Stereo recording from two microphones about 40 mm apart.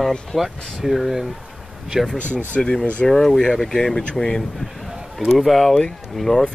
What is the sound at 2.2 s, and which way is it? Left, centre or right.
Speech, right.